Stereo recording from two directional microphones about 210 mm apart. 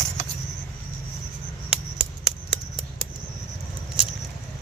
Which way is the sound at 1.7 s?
Centre (ahead or behind).